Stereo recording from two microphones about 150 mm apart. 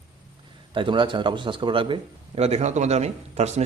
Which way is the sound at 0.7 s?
35° right (ahead or behind).